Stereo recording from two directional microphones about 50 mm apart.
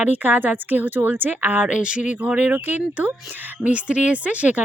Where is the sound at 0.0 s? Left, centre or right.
Right.